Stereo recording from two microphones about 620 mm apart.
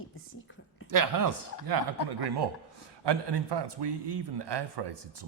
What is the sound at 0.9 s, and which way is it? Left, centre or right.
Speech, right.